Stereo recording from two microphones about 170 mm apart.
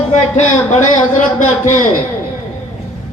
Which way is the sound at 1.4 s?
45° left (ahead or behind).